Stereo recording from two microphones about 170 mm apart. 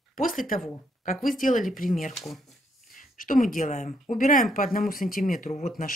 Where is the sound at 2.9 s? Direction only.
50° left (ahead or behind).